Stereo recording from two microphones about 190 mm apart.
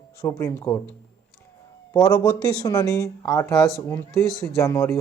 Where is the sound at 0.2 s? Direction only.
15° left (ahead or behind).